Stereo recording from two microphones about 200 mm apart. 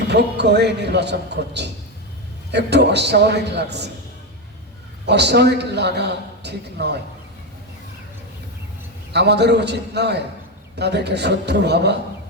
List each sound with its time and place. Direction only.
0.1 s a man's voice: 55° right (ahead or behind)
5.0 s a man's voice: 55° right (ahead or behind)
9.1 s a man's voice: 55° right (ahead or behind)